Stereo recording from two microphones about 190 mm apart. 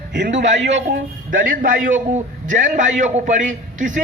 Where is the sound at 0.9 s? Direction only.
45° right (ahead or behind).